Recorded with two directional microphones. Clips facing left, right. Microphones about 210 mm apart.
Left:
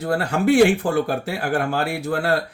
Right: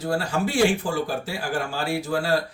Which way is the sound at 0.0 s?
60° left (ahead or behind).